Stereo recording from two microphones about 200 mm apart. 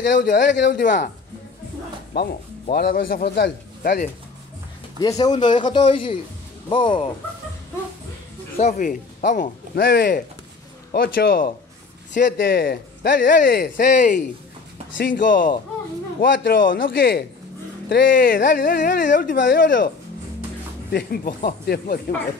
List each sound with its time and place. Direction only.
0.1 s speech: 55° left (ahead or behind)
2.1 s speech: 55° left (ahead or behind)
5.0 s speech: 20° left (ahead or behind)
8.5 s speech: 35° left (ahead or behind); by 13.2 s 55° left (ahead or behind)
13.2 s speech: 45° left (ahead or behind)
20.9 s speech: 45° left (ahead or behind)